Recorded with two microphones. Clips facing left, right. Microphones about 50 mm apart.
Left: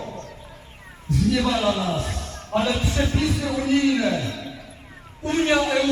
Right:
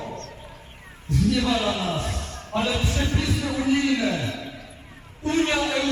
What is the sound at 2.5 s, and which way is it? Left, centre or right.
Speech, centre.